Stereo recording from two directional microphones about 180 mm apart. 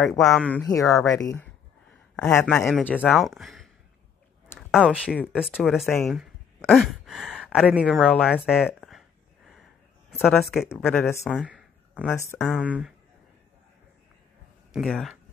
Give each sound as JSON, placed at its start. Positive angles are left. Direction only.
{"t": 0.2, "sound": "speech", "side_deg": 5}
{"t": 0.7, "sound": "speech", "side_deg": 20}
{"t": 2.2, "sound": "speech", "side_deg": 5}
{"t": 10.2, "sound": "speech", "side_deg": 0}
{"t": 12.6, "sound": "speech", "side_deg": -5}
{"t": 14.7, "sound": "speech", "side_deg": 0}